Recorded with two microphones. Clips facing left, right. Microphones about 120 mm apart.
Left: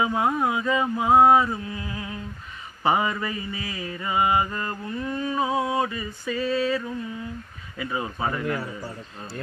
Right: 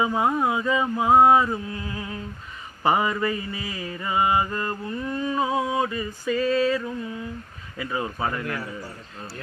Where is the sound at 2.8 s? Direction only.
15° left (ahead or behind).